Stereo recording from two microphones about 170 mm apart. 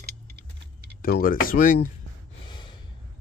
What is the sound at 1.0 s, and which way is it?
Speech, 60° left (ahead or behind).